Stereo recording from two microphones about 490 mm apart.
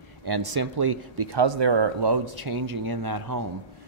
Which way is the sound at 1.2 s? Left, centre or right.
Right.